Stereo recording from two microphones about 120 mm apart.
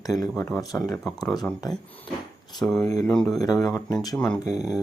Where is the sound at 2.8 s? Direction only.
30° left (ahead or behind).